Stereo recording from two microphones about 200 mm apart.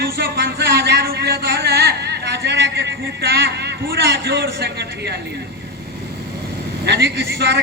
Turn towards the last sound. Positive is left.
turn(degrees=-60)  # may be behind; listen again after turning